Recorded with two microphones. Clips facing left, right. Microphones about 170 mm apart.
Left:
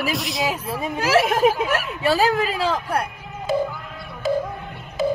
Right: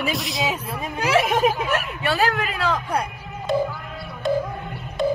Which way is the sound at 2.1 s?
30° left (ahead or behind).